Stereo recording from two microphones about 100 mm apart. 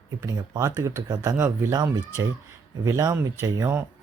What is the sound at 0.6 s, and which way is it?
Speech, 30° right (ahead or behind).